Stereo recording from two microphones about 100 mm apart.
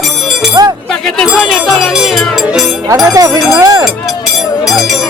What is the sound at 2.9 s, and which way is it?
Speech, 35° right (ahead or behind).